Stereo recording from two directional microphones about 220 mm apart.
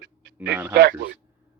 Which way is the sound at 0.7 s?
50° right (ahead or behind).